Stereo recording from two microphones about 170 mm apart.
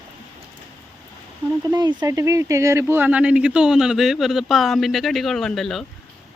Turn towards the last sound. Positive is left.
turn(degrees=0)  # may be behind; listen again after turning